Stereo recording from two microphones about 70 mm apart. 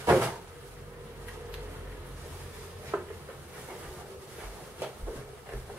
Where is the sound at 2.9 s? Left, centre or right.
Right.